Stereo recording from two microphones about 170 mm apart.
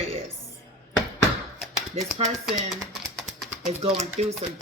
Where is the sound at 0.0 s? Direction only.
35° right (ahead or behind).